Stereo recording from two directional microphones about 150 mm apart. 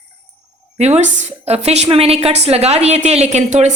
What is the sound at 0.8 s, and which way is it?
A woman's voice, 50° right (ahead or behind).